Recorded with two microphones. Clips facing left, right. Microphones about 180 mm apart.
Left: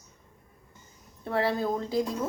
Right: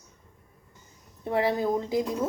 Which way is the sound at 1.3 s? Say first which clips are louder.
Right 2 dB; 15° right (ahead or behind).